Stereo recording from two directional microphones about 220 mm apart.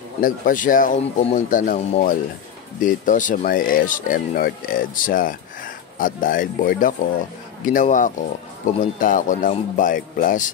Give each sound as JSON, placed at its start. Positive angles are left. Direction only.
{"t": 0.2, "sound": "speech", "side_deg": 40}